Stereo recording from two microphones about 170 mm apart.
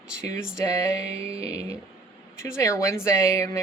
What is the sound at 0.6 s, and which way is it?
Speech, 20° left (ahead or behind).